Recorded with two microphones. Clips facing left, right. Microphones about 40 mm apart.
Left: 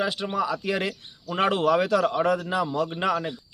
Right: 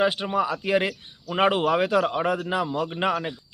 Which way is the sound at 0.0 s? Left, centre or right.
Right.